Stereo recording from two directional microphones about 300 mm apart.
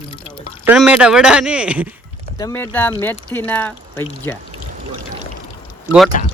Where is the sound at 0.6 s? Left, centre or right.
Centre.